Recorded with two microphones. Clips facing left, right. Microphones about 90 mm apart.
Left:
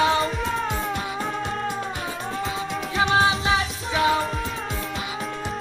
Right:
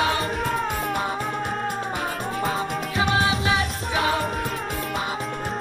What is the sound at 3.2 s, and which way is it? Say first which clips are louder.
Music: left 3 dB; 30° left (ahead or behind).